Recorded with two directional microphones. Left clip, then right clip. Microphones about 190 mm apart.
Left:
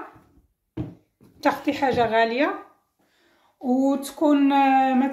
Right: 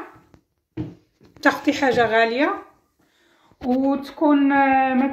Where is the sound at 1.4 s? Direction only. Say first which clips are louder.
Right 3 dB; 10° right (ahead or behind).